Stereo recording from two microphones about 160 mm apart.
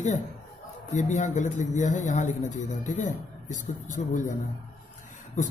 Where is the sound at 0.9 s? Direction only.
50° left (ahead or behind).